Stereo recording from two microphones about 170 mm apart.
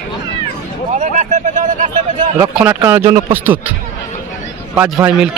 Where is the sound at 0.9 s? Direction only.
45° right (ahead or behind).